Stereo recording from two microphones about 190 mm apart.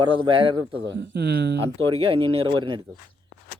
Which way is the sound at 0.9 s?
65° right (ahead or behind).